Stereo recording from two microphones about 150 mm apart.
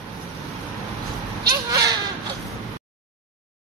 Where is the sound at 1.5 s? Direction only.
25° right (ahead or behind).